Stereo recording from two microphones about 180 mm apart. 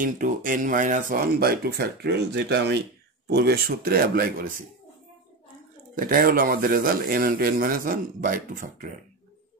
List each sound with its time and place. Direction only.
0.0 s speech: 50° right (ahead or behind)
5.9 s speech: 50° right (ahead or behind)